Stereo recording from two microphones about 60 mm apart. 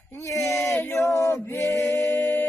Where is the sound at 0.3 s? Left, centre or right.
Left.